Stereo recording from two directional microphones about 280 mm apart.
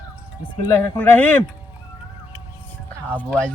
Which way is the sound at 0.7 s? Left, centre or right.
Centre.